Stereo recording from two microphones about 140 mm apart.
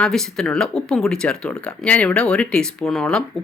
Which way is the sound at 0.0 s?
5° left (ahead or behind).